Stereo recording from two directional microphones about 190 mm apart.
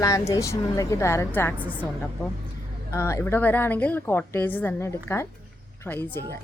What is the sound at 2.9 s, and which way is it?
A woman's voice, 15° left (ahead or behind).